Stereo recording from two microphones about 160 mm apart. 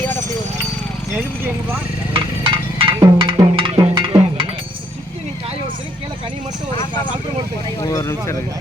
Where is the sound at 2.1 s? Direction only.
30° right (ahead or behind).